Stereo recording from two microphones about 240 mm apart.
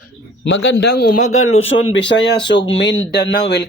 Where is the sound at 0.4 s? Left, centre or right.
Left.